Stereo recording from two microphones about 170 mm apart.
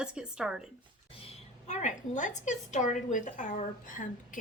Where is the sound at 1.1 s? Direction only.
40° left (ahead or behind).